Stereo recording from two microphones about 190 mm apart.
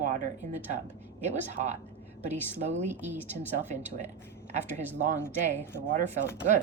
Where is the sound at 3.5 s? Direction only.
40° right (ahead or behind).